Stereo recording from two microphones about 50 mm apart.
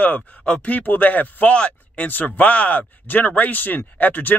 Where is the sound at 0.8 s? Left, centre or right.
Left.